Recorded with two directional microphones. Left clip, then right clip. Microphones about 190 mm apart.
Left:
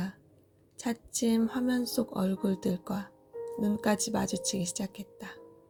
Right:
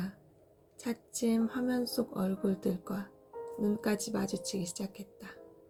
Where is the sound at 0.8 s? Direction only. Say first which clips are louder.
Left 3 dB; 45° left (ahead or behind).